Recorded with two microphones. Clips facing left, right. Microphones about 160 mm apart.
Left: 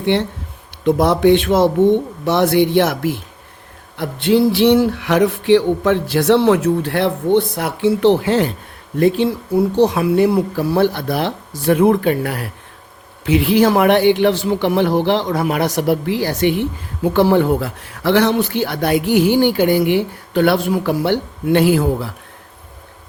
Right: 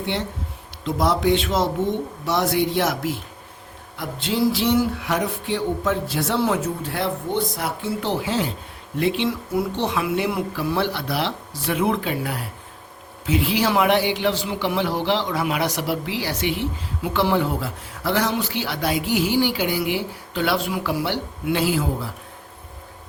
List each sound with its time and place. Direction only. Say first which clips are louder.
0.0 s a man's voice: left 9 dB; 65° left (ahead or behind)
3.9 s a sound: left 10 dB; 65° left (ahead or behind)
9.0 s a man's voice: left 7 dB; 45° left (ahead or behind); by 22.1 s 60° left (ahead or behind)